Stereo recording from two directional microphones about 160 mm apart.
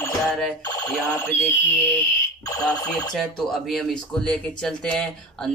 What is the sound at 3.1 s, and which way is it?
A man's voice, centre (ahead or behind).